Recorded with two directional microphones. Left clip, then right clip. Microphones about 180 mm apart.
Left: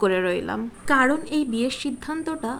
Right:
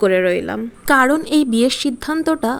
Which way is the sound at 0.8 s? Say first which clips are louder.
Right 6 dB; 50° right (ahead or behind).